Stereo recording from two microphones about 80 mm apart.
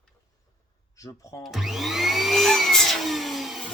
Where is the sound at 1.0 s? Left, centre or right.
Left.